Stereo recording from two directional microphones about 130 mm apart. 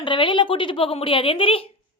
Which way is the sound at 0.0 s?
40° left (ahead or behind).